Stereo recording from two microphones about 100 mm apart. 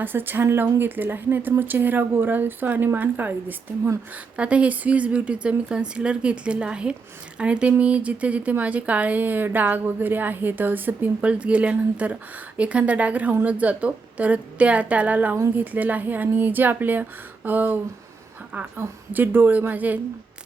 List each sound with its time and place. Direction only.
0.0 s a woman's voice: 20° right (ahead or behind)